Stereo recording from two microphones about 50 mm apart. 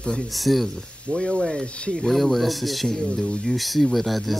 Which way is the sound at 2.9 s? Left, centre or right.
Centre.